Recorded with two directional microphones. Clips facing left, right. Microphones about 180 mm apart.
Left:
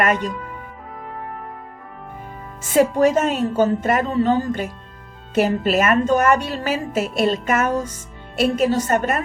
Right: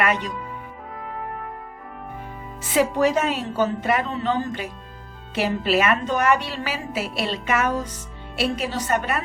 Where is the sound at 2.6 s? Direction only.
45° left (ahead or behind).